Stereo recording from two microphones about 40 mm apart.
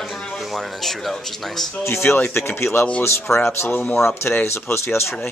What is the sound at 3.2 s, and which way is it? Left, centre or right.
Speech, left.